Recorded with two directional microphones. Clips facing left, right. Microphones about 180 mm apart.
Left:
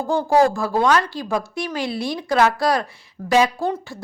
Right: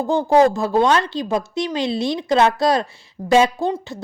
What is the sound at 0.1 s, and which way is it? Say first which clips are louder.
A woman's voice: right 2 dB; 20° right (ahead or behind).